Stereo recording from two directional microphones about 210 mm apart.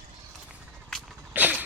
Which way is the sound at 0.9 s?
5° right (ahead or behind).